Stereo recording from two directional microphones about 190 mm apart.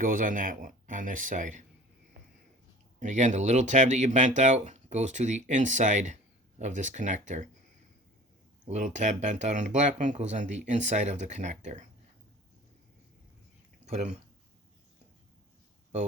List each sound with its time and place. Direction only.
0.0 s speech: 45° right (ahead or behind)
3.0 s speech: 40° right (ahead or behind)
8.6 s speech: 40° right (ahead or behind)
13.8 s speech: 35° right (ahead or behind)